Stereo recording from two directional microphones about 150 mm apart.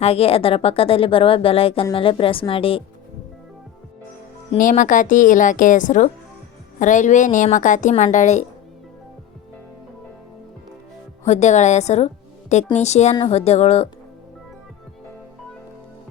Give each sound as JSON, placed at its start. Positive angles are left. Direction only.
{"t": 0.0, "sound": "speech", "side_deg": 40}
{"t": 4.5, "sound": "a woman's voice", "side_deg": 60}
{"t": 11.3, "sound": "speech", "side_deg": 50}